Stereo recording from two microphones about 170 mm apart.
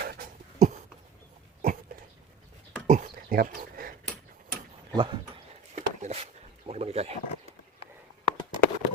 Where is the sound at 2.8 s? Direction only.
55° right (ahead or behind).